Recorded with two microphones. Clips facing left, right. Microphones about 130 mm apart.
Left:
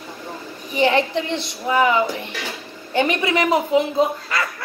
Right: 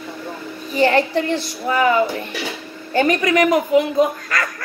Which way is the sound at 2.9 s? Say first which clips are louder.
Right 3 dB; 45° right (ahead or behind).